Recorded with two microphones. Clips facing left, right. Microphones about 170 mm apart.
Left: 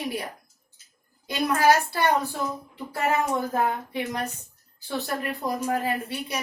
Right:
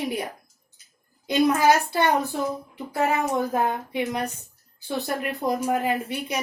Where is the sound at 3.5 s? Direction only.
20° right (ahead or behind).